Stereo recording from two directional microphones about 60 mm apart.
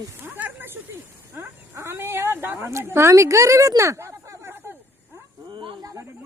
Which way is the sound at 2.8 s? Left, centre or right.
Right.